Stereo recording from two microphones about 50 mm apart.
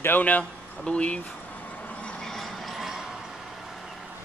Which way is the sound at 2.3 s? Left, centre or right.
Centre.